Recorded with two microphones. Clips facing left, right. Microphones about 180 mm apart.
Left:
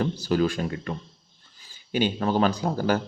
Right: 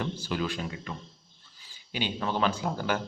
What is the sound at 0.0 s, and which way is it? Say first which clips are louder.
Speech: left 8 dB; 40° left (ahead or behind).